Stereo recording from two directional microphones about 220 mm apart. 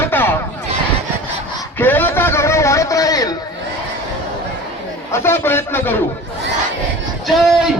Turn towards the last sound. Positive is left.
turn(degrees=0)  # may be behind; listen again after turning